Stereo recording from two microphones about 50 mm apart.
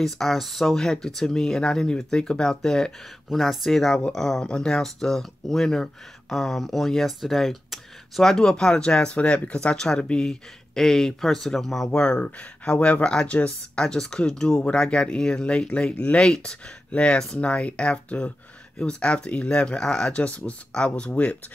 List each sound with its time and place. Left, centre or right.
0.0 s speech: centre
3.3 s speech: centre; by 21.4 s left